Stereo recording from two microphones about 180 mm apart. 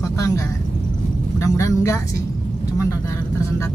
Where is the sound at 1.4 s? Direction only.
15° left (ahead or behind).